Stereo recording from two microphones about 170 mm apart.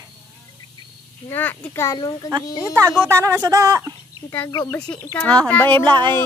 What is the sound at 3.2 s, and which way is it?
Speech, 20° right (ahead or behind).